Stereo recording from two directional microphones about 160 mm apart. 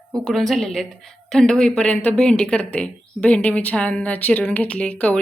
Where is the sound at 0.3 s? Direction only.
Centre (ahead or behind).